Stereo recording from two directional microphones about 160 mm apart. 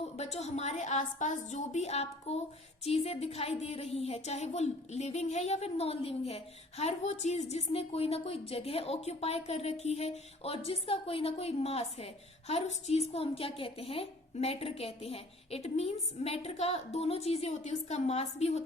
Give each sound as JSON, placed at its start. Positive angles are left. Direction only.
{"t": 0.2, "sound": "a woman's voice", "side_deg": 45}